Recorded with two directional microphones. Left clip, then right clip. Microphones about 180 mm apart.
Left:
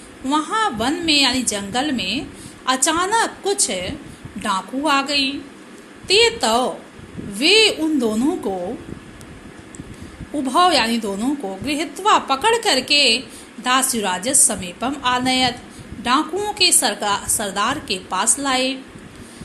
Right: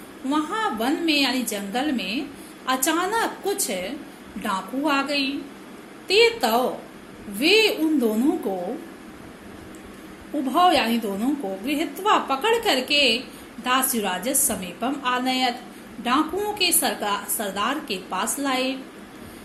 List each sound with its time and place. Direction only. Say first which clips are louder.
0.3 s a woman's voice: left 5 dB; 20° left (ahead or behind)
10.4 s a woman's voice: left 3 dB; 20° left (ahead or behind)